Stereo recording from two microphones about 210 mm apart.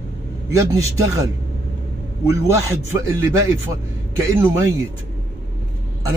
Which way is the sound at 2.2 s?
15° right (ahead or behind).